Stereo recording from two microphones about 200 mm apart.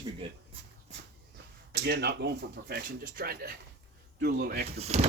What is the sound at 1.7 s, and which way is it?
Speech, 55° right (ahead or behind).